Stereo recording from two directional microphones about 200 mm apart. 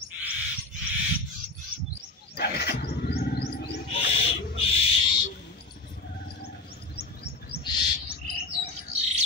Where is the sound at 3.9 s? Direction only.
30° left (ahead or behind).